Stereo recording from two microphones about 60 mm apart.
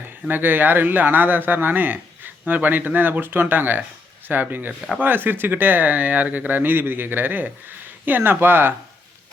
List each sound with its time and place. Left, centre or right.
0.0 s a man's voice: right